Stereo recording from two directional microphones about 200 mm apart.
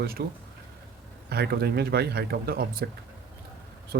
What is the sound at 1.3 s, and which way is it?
Speech, 55° right (ahead or behind).